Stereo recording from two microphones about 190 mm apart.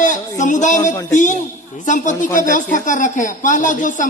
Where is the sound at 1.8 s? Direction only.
40° left (ahead or behind).